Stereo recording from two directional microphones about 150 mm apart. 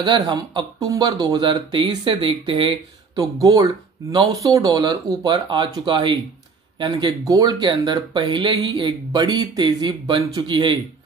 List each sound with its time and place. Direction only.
0.0 s speech: 30° right (ahead or behind)
3.2 s speech: 20° right (ahead or behind)